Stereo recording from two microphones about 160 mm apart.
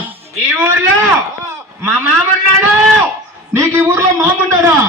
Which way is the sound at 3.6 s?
15° right (ahead or behind).